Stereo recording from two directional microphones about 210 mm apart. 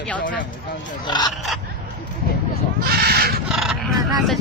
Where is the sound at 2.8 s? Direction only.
50° right (ahead or behind).